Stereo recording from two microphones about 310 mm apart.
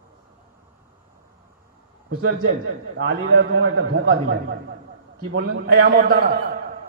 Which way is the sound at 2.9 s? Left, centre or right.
Right.